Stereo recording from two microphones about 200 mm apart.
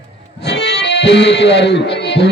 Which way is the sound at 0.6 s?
60° left (ahead or behind).